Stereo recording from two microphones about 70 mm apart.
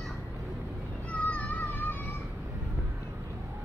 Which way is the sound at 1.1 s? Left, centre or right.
Centre.